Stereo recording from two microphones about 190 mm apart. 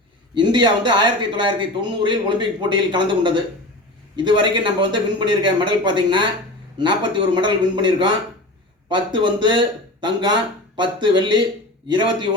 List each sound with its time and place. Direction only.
0.3 s speech: 25° right (ahead or behind)